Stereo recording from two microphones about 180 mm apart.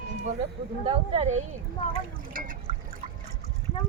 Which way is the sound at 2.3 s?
50° right (ahead or behind).